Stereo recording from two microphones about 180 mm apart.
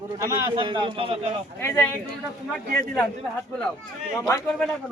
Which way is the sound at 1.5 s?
15° left (ahead or behind).